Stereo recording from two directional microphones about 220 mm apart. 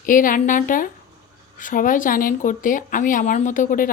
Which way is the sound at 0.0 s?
40° left (ahead or behind).